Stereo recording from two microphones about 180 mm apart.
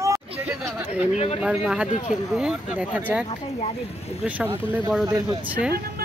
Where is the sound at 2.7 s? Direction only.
10° right (ahead or behind).